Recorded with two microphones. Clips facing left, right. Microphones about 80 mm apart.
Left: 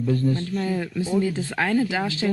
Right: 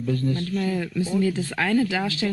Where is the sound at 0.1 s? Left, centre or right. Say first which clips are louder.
Left 1 dB; left.